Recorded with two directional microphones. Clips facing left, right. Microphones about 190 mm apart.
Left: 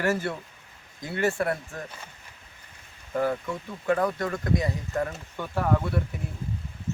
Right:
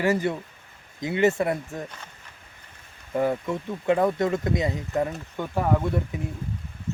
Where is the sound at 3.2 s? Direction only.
20° right (ahead or behind).